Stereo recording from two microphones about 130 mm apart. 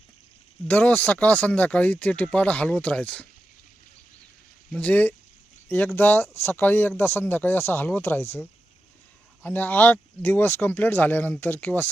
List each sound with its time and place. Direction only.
0.7 s speech: 10° left (ahead or behind)
4.7 s speech: 10° left (ahead or behind)
9.4 s speech: 15° left (ahead or behind)